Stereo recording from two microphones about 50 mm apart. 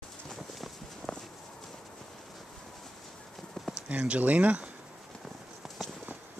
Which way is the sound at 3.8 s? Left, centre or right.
Right.